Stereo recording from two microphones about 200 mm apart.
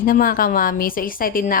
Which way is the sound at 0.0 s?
45° left (ahead or behind).